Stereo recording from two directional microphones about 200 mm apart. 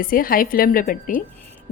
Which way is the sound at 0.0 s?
45° left (ahead or behind).